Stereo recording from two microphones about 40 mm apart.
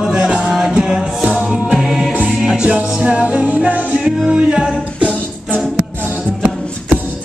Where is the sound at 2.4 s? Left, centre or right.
Centre.